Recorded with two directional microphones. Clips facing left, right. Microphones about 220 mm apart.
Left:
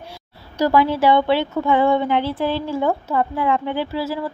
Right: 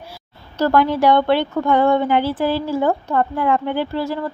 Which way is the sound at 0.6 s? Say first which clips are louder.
Right 1 dB; 5° left (ahead or behind).